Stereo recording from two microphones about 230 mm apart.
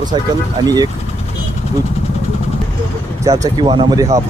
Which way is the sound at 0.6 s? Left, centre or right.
Centre.